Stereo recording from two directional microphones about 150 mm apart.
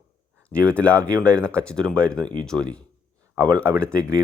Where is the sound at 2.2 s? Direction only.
30° right (ahead or behind).